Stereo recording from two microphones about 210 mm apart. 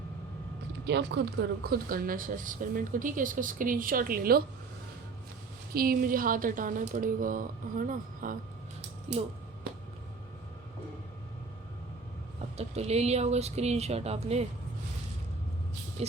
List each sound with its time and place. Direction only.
0.9 s speech: 55° right (ahead or behind)
5.7 s speech: 45° right (ahead or behind)
12.5 s speech: 30° right (ahead or behind)
16.0 s a sound: 30° right (ahead or behind)